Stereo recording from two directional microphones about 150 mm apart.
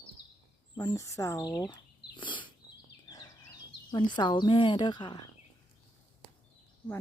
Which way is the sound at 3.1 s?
25° left (ahead or behind).